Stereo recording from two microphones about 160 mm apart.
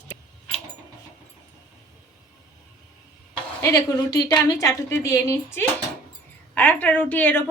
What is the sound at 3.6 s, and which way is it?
A woman's voice, 20° left (ahead or behind).